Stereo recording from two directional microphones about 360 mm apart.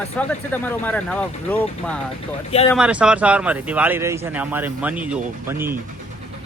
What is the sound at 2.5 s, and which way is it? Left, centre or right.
Speech, centre.